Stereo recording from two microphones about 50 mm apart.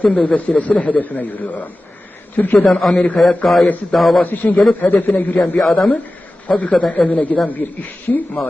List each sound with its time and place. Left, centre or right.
0.0 s a man's voice: left
2.6 s a man's voice: centre
4.2 s a man's voice: left
5.5 s speech: centre
6.5 s a woman's voice: left